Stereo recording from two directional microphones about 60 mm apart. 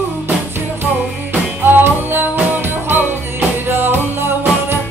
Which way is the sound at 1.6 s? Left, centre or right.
Right.